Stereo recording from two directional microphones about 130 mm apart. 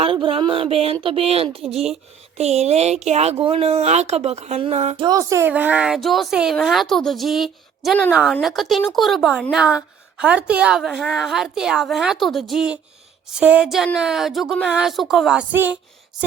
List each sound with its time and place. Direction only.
0.0 s a sound: 45° right (ahead or behind)
1.0 s speech: 50° right (ahead or behind)
4.9 s speech: 30° right (ahead or behind); by 15.8 s 10° right (ahead or behind)